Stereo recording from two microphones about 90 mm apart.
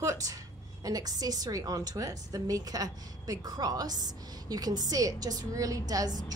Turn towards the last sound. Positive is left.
turn(degrees=-45)  # may be behind; listen again after turning